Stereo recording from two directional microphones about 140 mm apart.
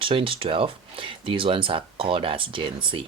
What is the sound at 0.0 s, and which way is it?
Speech, 40° right (ahead or behind).